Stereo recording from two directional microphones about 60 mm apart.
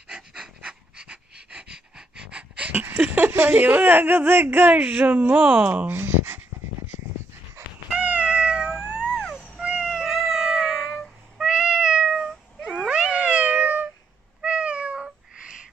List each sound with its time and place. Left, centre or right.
0.1 s pant: centre; by 3.3 s right
3.3 s speech: right; by 5.7 s centre
5.7 s a sound: right
7.9 s cat: right
9.0 s a sound: centre
9.6 s cat: centre
11.3 s meow: centre
12.7 s cat: centre